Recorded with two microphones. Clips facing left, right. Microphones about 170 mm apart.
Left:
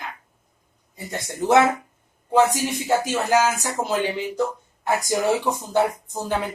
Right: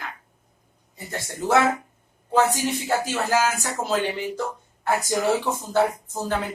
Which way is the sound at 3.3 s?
20° left (ahead or behind).